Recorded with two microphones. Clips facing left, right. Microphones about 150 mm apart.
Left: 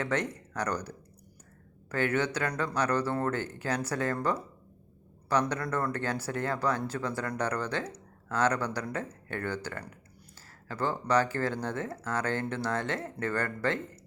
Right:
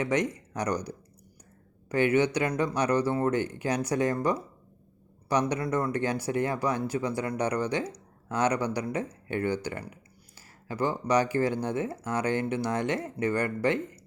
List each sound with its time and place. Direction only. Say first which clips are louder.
0.0 s speech: right 4 dB; 15° right (ahead or behind)